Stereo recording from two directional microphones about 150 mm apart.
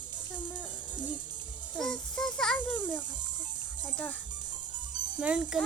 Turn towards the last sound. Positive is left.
turn(degrees=-5)  # may be behind; listen again after turning